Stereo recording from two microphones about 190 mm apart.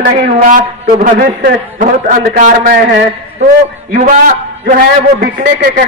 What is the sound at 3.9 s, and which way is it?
Speech, 35° right (ahead or behind).